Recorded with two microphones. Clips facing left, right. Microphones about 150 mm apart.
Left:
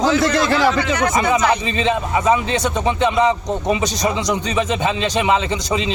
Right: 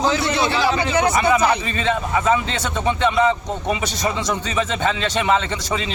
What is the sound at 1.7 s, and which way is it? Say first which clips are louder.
Speech: left 2 dB; 20° left (ahead or behind).